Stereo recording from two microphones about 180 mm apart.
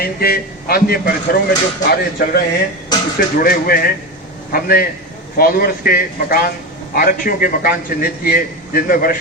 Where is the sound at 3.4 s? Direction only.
55° left (ahead or behind).